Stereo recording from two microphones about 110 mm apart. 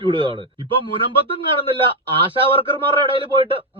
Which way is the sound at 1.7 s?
50° right (ahead or behind).